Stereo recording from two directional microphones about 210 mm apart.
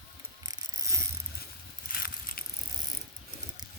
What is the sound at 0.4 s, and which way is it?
Pulleys, 15° right (ahead or behind).